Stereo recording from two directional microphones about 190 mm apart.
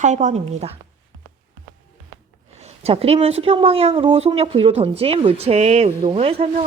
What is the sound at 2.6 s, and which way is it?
A woman's voice, 35° right (ahead or behind).